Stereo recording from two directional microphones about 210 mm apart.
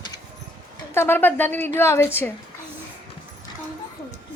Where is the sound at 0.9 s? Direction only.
10° left (ahead or behind).